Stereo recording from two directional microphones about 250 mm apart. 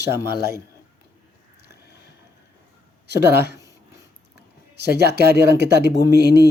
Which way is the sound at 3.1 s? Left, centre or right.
Right.